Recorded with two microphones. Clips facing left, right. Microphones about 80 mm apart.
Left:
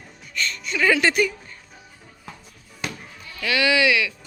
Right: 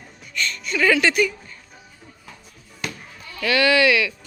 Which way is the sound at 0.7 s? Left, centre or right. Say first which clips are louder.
Right 1 dB; centre.